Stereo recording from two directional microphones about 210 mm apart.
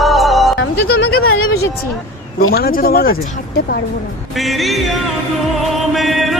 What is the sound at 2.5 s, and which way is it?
Speech, 45° left (ahead or behind).